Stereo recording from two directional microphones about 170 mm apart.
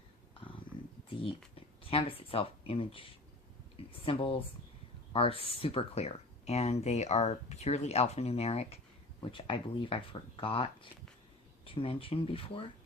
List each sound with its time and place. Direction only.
1.5 s speech: 35° left (ahead or behind)